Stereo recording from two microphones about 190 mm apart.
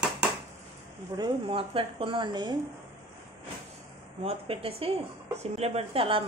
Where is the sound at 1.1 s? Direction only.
25° right (ahead or behind).